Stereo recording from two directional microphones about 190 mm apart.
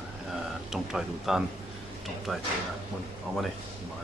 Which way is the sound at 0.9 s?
Centre (ahead or behind).